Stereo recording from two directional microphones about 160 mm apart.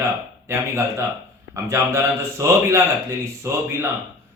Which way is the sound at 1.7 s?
20° right (ahead or behind).